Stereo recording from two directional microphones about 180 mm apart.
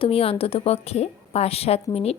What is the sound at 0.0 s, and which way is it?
A woman's voice, 30° left (ahead or behind).